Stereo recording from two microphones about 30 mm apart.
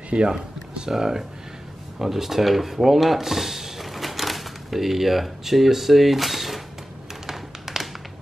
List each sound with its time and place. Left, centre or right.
0.1 s speech: right
0.8 s speech: centre
7.2 s tap: centre